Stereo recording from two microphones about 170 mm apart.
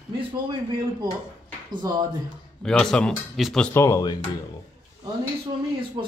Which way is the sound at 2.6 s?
5° left (ahead or behind).